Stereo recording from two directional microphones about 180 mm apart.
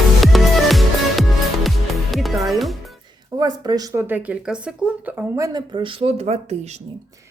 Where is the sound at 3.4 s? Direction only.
20° right (ahead or behind); by 5.3 s 5° right (ahead or behind).